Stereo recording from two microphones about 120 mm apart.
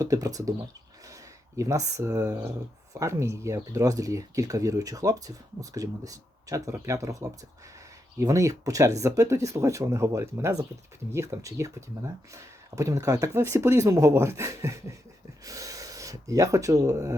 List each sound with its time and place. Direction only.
0.0 s speech: 30° right (ahead or behind)
1.5 s speech: 30° right (ahead or behind)